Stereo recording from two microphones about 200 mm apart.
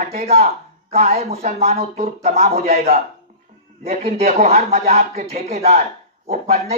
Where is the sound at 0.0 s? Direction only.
30° right (ahead or behind).